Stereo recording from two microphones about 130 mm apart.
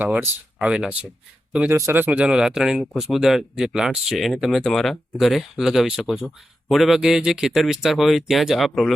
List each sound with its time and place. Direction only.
0.0 s speech: 10° right (ahead or behind)
1.7 s speech: 20° right (ahead or behind); by 8.9 s centre (ahead or behind)